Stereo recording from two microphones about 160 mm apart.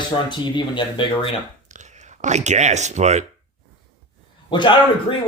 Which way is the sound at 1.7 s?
50° right (ahead or behind).